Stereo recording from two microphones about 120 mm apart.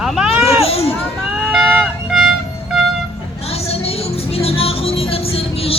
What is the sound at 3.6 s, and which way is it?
Music, 55° left (ahead or behind).